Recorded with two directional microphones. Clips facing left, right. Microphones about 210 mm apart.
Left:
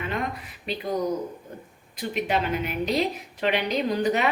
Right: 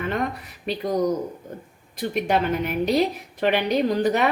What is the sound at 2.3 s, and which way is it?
A woman's voice, 55° right (ahead or behind).